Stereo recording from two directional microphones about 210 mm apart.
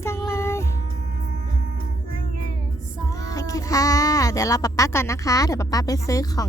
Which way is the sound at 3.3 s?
15° left (ahead or behind).